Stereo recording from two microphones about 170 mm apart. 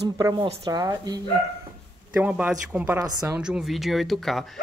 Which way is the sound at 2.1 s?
10° right (ahead or behind).